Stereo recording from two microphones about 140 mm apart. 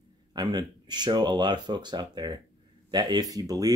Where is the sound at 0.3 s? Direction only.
30° right (ahead or behind).